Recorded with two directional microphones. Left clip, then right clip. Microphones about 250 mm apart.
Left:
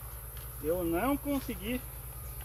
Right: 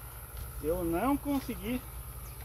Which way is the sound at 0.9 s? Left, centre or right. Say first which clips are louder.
Even; centre.